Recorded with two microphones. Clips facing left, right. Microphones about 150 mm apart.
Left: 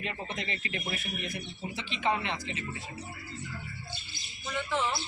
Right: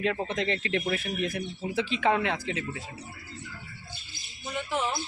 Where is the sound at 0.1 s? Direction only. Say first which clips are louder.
Right 8 dB; 90° right.